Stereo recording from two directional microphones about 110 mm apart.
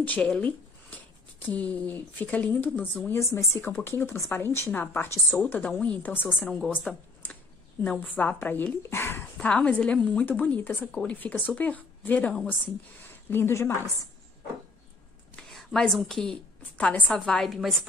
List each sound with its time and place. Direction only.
0.0 s speech: 10° left (ahead or behind)
5.4 s a woman's voice: 10° left (ahead or behind)
9.5 s a woman's voice: 10° left (ahead or behind)
15.3 s a woman's voice: 5° left (ahead or behind)
17.1 s a woman's voice: 5° left (ahead or behind)